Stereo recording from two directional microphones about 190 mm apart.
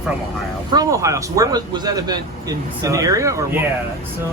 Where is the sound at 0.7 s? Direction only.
20° right (ahead or behind).